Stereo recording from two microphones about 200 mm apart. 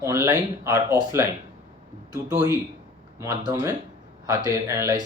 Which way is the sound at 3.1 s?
15° right (ahead or behind).